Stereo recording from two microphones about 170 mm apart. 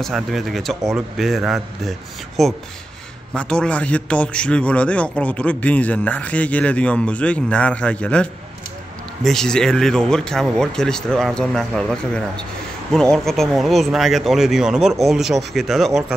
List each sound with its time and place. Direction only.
0.0 s a man's voice: centre (ahead or behind)